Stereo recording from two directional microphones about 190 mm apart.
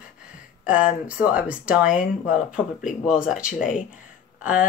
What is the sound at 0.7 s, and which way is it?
Speech, 5° right (ahead or behind).